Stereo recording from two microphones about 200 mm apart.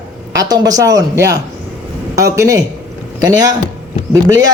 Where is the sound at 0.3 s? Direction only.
20° right (ahead or behind).